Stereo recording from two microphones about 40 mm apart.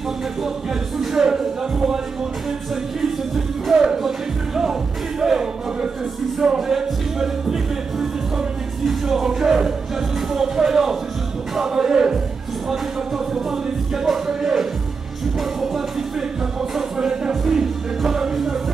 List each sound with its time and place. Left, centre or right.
1.1 s music: centre
3.7 s music: centre
5.2 s crowd: centre
6.4 s music: centre
13.3 s music: centre